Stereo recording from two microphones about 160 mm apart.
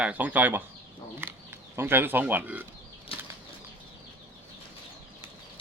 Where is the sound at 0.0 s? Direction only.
10° right (ahead or behind).